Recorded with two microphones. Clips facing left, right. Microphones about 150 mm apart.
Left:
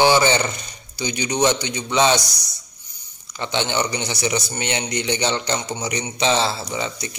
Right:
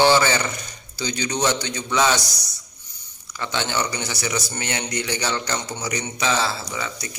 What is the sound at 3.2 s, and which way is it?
A man's voice, 20° left (ahead or behind).